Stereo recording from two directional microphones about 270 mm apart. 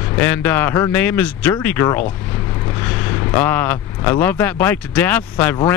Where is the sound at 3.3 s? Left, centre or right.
Centre.